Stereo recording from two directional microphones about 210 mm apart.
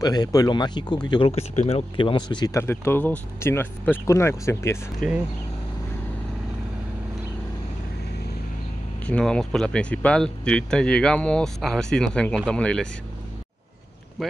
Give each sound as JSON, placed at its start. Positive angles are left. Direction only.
{"t": 0.0, "sound": "speech", "side_deg": 20}
{"t": 5.0, "sound": "speech", "side_deg": 0}
{"t": 9.0, "sound": "speech", "side_deg": 5}